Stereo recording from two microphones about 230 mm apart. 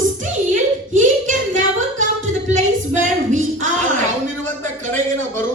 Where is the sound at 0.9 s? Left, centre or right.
Right.